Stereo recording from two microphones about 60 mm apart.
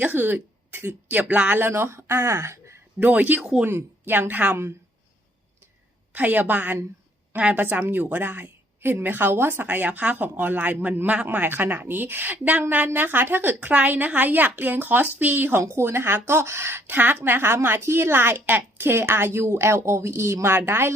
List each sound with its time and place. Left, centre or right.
0.0 s speech: right
1.2 s a woman's voice: right
1.5 s a woman's voice: right
3.0 s a woman's voice: right
6.1 s a woman's voice: right
11.4 s a woman's voice: right
15.6 s a woman's voice: right
16.8 s a woman's voice: right